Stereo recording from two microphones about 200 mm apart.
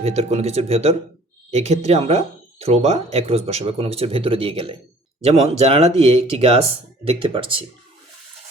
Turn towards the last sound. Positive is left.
turn(degrees=-25)  # may be behind; listen again after turning